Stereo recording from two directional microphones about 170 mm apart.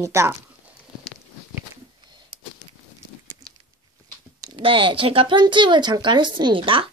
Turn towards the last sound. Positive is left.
turn(degrees=-30)  # may be behind; listen again after turning